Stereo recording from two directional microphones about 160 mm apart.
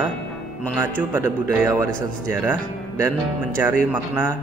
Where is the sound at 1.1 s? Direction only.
10° right (ahead or behind).